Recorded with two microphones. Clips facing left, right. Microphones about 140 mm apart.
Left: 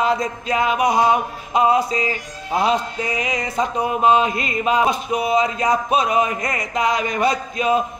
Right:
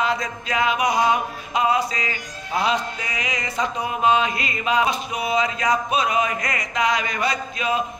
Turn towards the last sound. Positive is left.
turn(degrees=40)  # may be behind; listen again after turning